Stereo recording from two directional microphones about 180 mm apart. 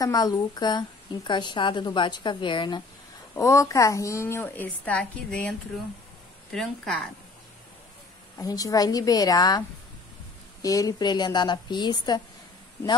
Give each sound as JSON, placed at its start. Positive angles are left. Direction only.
{"t": 0.0, "sound": "a woman's voice", "side_deg": 20}
{"t": 6.5, "sound": "a woman's voice", "side_deg": 0}
{"t": 8.4, "sound": "a woman's voice", "side_deg": 20}
{"t": 10.6, "sound": "a woman's voice", "side_deg": 20}